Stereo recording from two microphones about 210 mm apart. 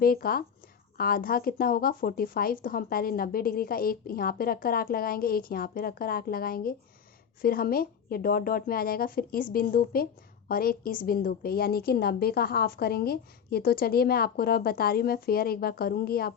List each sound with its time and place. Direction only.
0.0 s a woman's voice: 45° left (ahead or behind)